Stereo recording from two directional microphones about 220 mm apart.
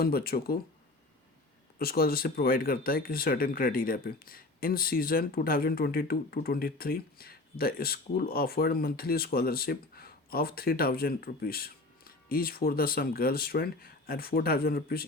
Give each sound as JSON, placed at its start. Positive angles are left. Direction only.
{"t": 0.0, "sound": "speech", "side_deg": 45}
{"t": 1.8, "sound": "speech", "side_deg": 45}